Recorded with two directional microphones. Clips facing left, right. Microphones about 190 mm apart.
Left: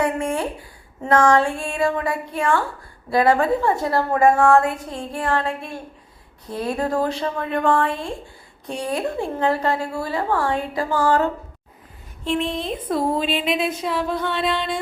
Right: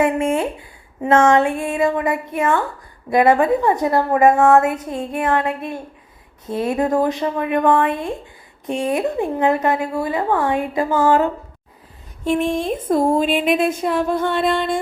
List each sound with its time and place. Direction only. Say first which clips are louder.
0.0 s a woman's voice: right 4 dB; 20° right (ahead or behind)
12.2 s a woman's voice: right 5 dB; 45° right (ahead or behind)